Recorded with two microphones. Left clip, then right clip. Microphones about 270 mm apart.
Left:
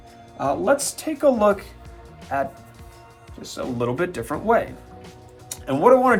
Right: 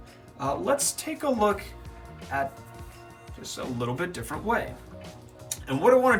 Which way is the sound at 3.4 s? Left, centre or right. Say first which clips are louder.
Left 5 dB; centre.